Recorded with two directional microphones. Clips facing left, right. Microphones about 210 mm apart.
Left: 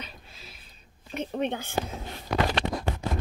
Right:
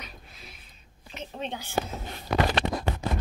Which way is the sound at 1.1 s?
55° left (ahead or behind).